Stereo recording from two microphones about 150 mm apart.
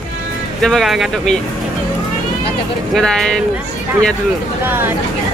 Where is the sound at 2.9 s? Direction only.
5° left (ahead or behind).